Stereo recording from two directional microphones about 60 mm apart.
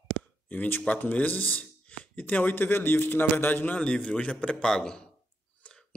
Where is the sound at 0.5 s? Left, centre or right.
Left.